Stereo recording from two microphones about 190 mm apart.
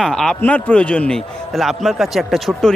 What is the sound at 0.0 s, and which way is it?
A man's voice, 5° left (ahead or behind).